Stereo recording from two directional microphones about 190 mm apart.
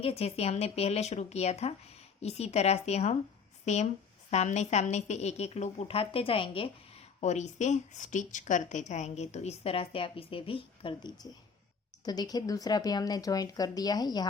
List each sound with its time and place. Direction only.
0.0 s a woman's voice: 30° left (ahead or behind)
4.3 s a woman's voice: 35° left (ahead or behind); by 14.3 s 20° left (ahead or behind)